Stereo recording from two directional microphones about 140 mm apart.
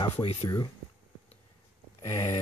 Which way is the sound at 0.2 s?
45° left (ahead or behind).